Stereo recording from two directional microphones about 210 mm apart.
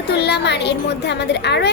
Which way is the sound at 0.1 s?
55° left (ahead or behind).